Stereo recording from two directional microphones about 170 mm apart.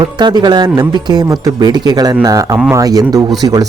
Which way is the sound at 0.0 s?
25° right (ahead or behind).